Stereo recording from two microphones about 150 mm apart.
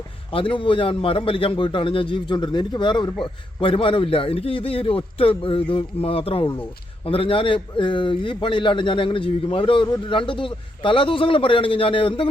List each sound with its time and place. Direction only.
0.3 s a man's voice: 35° left (ahead or behind)